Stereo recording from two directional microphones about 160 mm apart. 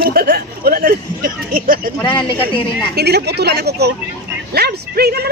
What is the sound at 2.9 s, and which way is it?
A woman's voice, 90° right.